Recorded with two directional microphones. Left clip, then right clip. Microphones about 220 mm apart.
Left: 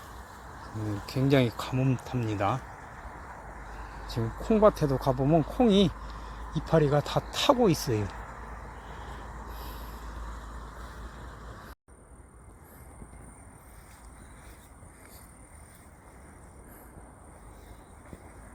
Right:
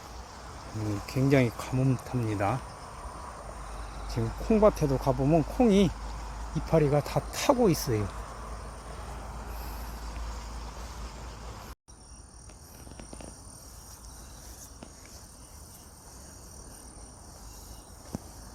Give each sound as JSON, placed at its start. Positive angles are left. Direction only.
{"t": 0.8, "sound": "speech", "side_deg": 0}
{"t": 1.9, "sound": "speech", "side_deg": 0}
{"t": 4.1, "sound": "speech", "side_deg": 0}